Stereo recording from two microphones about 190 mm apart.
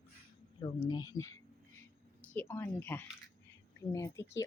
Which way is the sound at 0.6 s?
25° left (ahead or behind).